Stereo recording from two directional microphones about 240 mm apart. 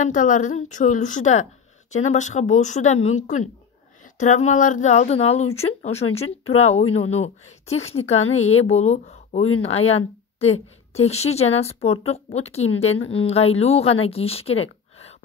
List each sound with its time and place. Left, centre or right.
0.0 s a woman's voice: left
11.0 s a woman's voice: left